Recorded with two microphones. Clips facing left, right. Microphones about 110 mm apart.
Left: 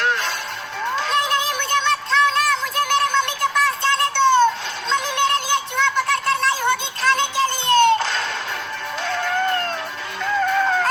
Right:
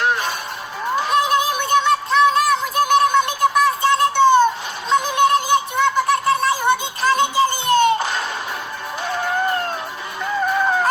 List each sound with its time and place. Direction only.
0.0 s music: 15° right (ahead or behind)
0.9 s a sound: 10° right (ahead or behind)
9.0 s music: 15° right (ahead or behind)